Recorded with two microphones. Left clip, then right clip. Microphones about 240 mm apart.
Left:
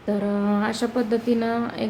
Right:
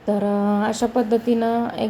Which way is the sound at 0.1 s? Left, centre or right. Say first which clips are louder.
Right 4 dB; centre.